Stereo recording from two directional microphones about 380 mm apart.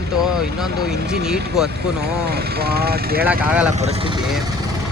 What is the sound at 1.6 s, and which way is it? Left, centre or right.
Speech, right.